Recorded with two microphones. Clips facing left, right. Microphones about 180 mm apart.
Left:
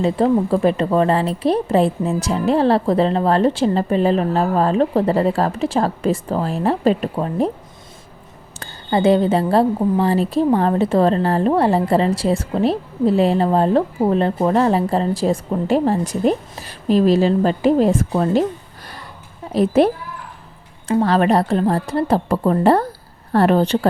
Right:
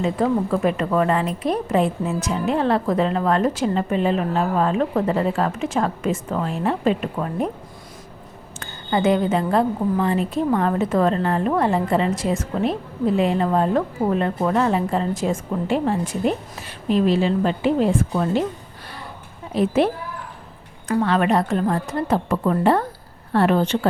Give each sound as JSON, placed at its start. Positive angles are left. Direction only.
{"t": 0.0, "sound": "a woman's voice", "side_deg": 30}
{"t": 8.5, "sound": "a woman's voice", "side_deg": 35}
{"t": 19.5, "sound": "a woman's voice", "side_deg": 40}